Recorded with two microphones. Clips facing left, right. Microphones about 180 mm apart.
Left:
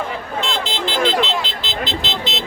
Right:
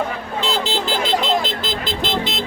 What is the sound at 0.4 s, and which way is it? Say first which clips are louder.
Vehicle: right 5 dB; 40° right (ahead or behind).